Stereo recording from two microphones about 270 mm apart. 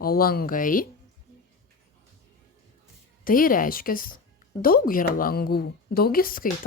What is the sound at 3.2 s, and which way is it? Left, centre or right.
A woman's voice, left.